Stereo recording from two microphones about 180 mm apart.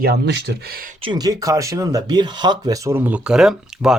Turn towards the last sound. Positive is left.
turn(degrees=-5)  # may be behind; listen again after turning